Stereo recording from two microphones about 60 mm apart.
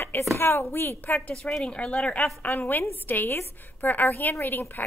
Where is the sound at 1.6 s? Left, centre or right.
Centre.